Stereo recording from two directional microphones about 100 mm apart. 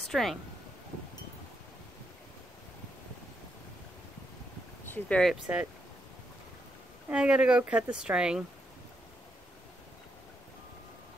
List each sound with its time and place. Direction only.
0.1 s speech: 5° left (ahead or behind)
4.8 s speech: 15° left (ahead or behind)
5.3 s speech: 15° right (ahead or behind)
7.1 s speech: 10° right (ahead or behind)